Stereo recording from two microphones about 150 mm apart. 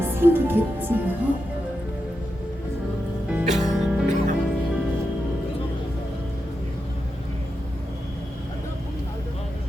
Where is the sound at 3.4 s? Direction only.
50° right (ahead or behind).